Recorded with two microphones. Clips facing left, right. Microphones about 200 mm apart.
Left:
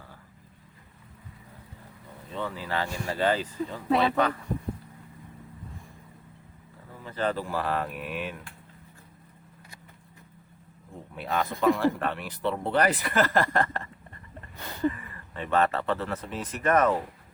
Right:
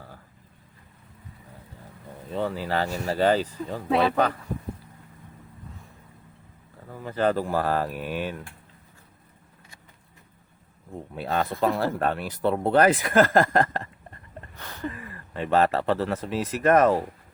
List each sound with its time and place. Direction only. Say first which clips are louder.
2.3 s speech: right 5 dB; 40° right (ahead or behind)
3.8 s speech: right 2 dB; centre (ahead or behind)
7.0 s speech: right 5 dB; 45° right (ahead or behind)
11.1 s speech: right 2 dB; 35° right (ahead or behind)
14.5 s a sound: left 6 dB; 10° left (ahead or behind)
14.9 s a sound: right 4 dB; 40° right (ahead or behind)
16.6 s speech: right 4 dB; 40° right (ahead or behind)